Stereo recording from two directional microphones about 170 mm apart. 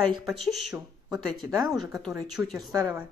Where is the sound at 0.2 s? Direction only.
Centre (ahead or behind).